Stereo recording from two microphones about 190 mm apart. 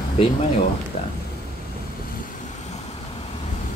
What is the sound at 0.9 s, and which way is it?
Speech, 35° left (ahead or behind).